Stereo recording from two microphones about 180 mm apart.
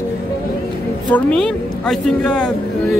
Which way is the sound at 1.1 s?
5° left (ahead or behind).